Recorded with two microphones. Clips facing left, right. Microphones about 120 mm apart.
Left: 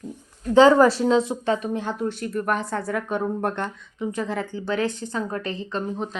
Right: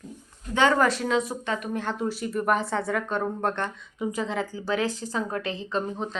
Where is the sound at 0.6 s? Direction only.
30° left (ahead or behind).